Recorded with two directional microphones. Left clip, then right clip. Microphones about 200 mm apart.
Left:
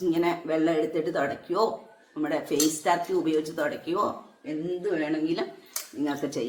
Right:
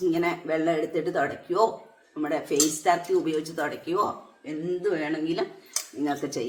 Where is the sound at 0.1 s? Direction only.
Centre (ahead or behind).